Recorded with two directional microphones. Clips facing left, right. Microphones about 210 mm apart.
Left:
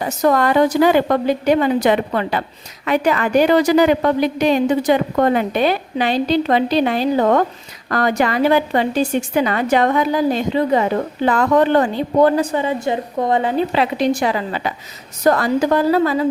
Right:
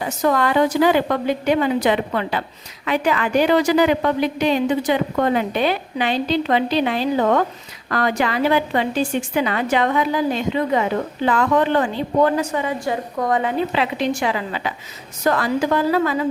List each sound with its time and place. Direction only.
0.0 s a woman's voice: 45° left (ahead or behind); by 13.5 s 25° left (ahead or behind)
13.7 s a woman's voice: 35° left (ahead or behind)